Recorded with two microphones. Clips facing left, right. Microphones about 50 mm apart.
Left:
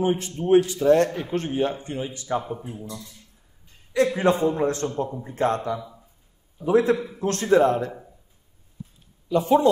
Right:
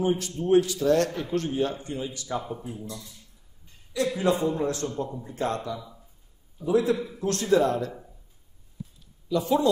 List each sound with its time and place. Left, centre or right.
0.0 s a man's voice: left
3.9 s a man's voice: left
5.8 s a sound: centre
6.6 s a man's voice: left
7.0 s a man's voice: left
9.3 s a man's voice: left